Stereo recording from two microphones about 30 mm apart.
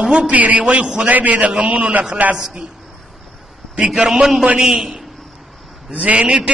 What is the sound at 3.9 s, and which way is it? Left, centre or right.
A man's voice, centre.